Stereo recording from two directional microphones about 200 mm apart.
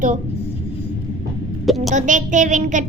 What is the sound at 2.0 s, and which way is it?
Child singing, 40° right (ahead or behind).